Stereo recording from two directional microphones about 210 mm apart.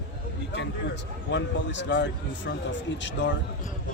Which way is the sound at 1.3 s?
60° left (ahead or behind).